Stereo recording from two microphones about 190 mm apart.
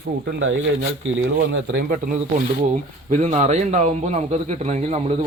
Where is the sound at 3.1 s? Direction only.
40° right (ahead or behind).